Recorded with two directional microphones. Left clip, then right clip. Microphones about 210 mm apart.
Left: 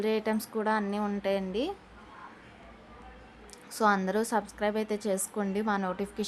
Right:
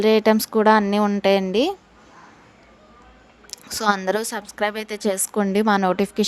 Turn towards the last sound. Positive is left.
turn(degrees=-40)  # may be behind; listen again after turning